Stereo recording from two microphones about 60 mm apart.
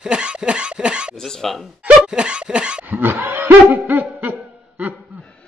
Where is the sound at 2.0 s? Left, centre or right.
Centre.